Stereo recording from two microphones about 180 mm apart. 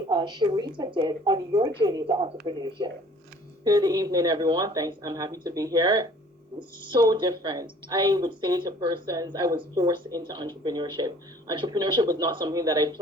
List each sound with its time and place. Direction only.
0.1 s speech: 25° right (ahead or behind)